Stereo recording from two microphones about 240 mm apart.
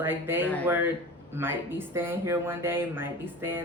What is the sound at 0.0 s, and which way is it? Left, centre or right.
Speech, centre.